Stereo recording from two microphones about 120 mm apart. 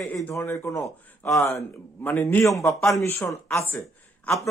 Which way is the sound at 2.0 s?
15° left (ahead or behind).